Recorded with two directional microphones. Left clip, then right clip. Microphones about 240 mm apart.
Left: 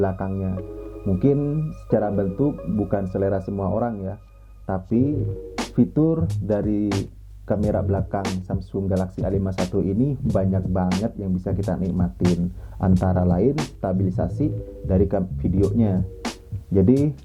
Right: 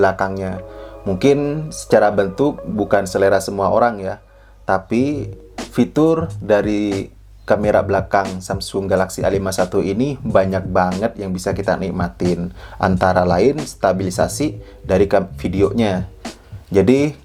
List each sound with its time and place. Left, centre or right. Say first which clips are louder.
0.0 s speech: right 9 dB; centre
2.4 s speech: right 6 dB; right
2.9 s speech: right 10 dB; centre
3.5 s speech: right 10 dB; right
3.8 s speech: right 10 dB; centre
16.2 s music: left 1 dB; centre
16.7 s speech: right 6 dB; centre